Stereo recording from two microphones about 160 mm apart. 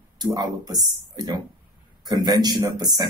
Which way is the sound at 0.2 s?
25° right (ahead or behind).